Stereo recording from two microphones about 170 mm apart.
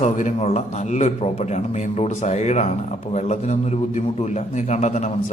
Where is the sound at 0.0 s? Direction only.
45° left (ahead or behind).